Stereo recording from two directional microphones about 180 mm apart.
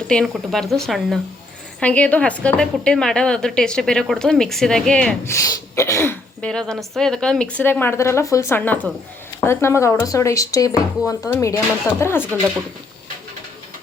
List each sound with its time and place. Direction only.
0.1 s a woman's voice: 5° left (ahead or behind)
5.3 s a woman's voice: 15° left (ahead or behind)